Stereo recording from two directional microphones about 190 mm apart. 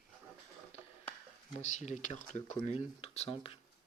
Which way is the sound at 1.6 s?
40° left (ahead or behind).